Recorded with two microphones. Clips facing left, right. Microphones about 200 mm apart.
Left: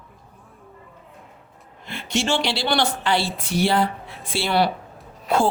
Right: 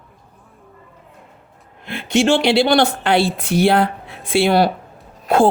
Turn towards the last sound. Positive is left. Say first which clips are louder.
# right 6 dB
turn(degrees=-55)  # may be behind; listen again after turning